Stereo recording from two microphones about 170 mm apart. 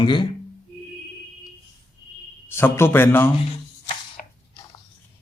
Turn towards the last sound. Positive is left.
turn(degrees=55)  # may be behind; listen again after turning